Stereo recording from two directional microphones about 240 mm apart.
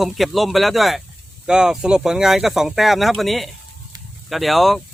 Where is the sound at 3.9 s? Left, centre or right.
Centre.